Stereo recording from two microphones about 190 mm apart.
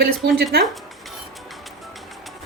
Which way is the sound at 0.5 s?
55° right (ahead or behind).